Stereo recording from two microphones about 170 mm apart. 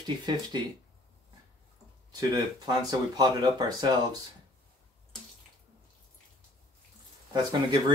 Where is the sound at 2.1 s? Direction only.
25° right (ahead or behind).